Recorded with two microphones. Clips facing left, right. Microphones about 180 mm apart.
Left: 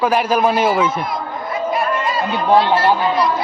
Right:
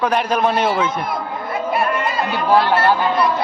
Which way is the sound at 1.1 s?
60° right (ahead or behind).